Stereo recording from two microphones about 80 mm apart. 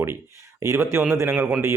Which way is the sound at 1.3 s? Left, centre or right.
Centre.